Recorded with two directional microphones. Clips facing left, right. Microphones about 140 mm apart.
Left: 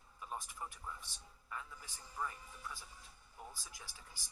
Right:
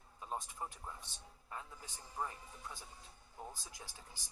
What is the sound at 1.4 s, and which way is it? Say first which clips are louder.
Speech: even; 30° right (ahead or behind).